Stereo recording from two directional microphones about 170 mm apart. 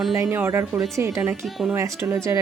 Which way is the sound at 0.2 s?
15° right (ahead or behind).